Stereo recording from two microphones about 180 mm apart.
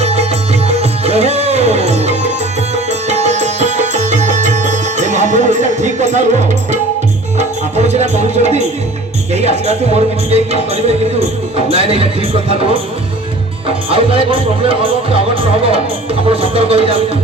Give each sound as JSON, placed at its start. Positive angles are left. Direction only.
{"t": 0.0, "sound": "music", "side_deg": -35}
{"t": 7.3, "sound": "music", "side_deg": -40}
{"t": 9.3, "sound": "speech", "side_deg": -35}